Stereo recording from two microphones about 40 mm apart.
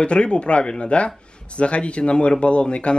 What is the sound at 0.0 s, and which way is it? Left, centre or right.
Speech, left.